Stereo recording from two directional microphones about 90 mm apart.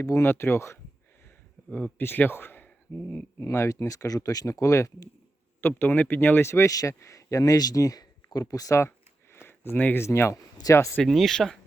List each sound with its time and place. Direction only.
0.0 s speech: 30° left (ahead or behind)
5.5 s speech: 25° left (ahead or behind)
9.3 s speech: 25° left (ahead or behind)
10.9 s speech: centre (ahead or behind)